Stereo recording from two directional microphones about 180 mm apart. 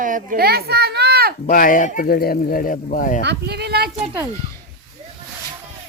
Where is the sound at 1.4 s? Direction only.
50° left (ahead or behind).